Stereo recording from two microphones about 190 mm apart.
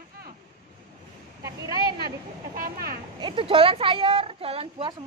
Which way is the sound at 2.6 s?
55° right (ahead or behind).